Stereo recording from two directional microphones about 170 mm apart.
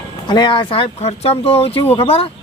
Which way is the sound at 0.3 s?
25° left (ahead or behind).